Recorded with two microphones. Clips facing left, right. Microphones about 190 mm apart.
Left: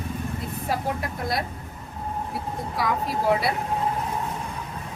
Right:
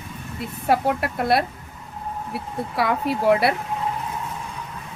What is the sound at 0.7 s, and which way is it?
Speech, 70° right (ahead or behind).